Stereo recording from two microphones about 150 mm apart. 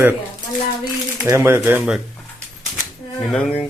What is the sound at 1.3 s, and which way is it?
Speech, 15° right (ahead or behind).